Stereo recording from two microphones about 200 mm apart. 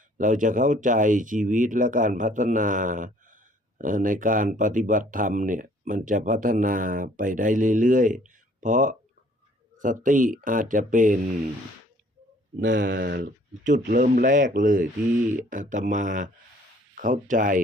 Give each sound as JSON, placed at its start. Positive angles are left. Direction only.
{"t": 0.2, "sound": "speech", "side_deg": -40}
{"t": 12.5, "sound": "speech", "side_deg": -45}
{"t": 12.9, "sound": "speech", "side_deg": -55}